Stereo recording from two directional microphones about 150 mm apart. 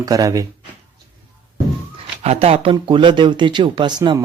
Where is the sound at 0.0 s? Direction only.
20° right (ahead or behind).